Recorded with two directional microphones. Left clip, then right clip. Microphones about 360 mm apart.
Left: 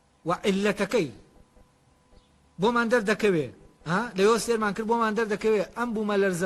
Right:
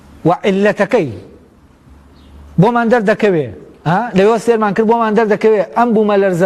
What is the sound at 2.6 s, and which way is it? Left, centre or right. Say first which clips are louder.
A man's voice: right 12 dB; right.